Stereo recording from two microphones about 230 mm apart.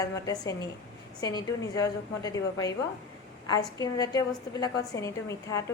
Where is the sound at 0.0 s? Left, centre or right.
Centre.